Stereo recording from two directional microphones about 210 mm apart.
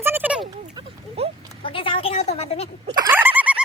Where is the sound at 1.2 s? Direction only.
30° right (ahead or behind).